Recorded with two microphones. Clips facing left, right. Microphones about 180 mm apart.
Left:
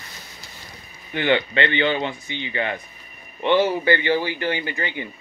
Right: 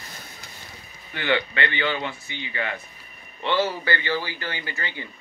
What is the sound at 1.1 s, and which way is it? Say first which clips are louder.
Speech: left 4 dB; 20° left (ahead or behind).